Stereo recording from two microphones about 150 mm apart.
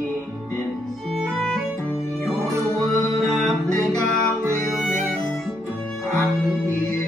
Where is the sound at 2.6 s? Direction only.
20° left (ahead or behind).